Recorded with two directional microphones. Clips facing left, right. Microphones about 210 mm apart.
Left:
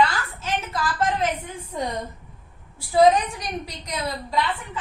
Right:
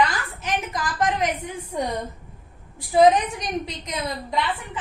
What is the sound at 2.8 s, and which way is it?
A woman's voice, 20° right (ahead or behind).